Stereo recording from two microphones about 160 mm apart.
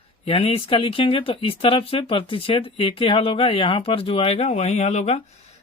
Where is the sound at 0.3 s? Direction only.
35° left (ahead or behind).